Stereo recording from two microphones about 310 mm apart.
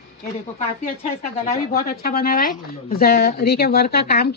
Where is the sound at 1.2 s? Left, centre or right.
Left.